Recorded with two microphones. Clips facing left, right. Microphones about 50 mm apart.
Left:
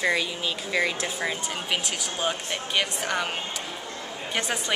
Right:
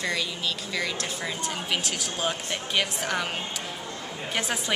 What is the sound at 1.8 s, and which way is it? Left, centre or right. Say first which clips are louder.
A woman's voice: left 1 dB; centre.